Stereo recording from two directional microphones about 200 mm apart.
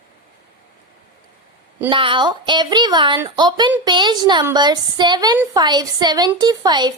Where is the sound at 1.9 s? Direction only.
25° right (ahead or behind).